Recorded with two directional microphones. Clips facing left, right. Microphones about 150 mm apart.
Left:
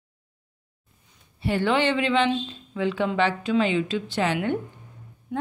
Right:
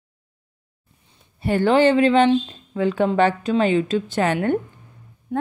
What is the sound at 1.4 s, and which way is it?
Speech, 45° right (ahead or behind).